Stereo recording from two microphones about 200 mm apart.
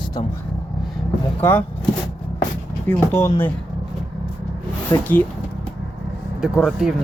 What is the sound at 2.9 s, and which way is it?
Speech, 10° left (ahead or behind).